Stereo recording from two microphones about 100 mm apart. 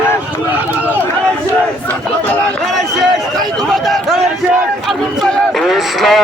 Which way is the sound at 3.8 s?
Centre (ahead or behind).